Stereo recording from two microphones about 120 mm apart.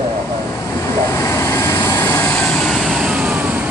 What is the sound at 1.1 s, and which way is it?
Vehicle, 20° left (ahead or behind).